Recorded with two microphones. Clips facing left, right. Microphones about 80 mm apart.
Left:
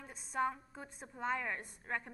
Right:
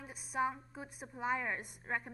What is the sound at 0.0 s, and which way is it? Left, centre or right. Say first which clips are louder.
A woman's voice: even; centre.